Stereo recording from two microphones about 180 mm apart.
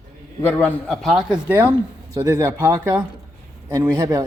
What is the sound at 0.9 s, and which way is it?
Speech, centre (ahead or behind).